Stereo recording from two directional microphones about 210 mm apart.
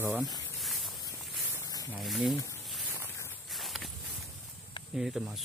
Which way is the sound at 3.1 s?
10° left (ahead or behind).